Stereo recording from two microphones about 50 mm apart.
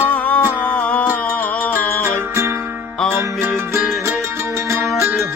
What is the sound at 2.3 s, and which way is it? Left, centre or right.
Music, right.